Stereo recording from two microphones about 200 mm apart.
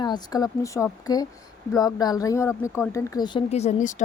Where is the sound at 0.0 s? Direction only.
20° left (ahead or behind).